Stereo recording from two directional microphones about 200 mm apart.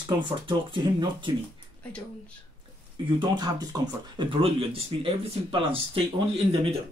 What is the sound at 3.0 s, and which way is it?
Speech, 25° right (ahead or behind).